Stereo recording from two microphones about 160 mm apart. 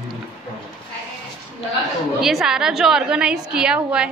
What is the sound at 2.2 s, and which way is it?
A woman's voice, centre (ahead or behind).